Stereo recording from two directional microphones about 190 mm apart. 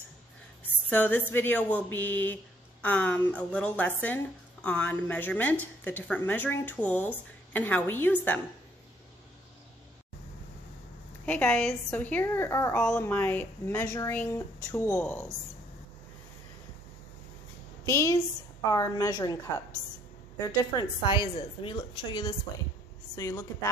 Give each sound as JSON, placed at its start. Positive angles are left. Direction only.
{"t": 0.8, "sound": "speech", "side_deg": 10}
{"t": 11.2, "sound": "speech", "side_deg": 5}
{"t": 17.8, "sound": "speech", "side_deg": 15}
{"t": 20.7, "sound": "a woman's voice", "side_deg": 25}